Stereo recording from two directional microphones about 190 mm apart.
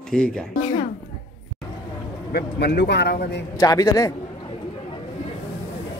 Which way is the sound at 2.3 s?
60° left (ahead or behind).